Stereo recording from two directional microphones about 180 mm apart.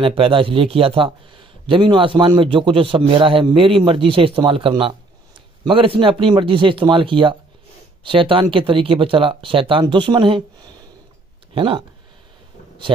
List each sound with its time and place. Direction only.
0.0 s speech: 30° right (ahead or behind)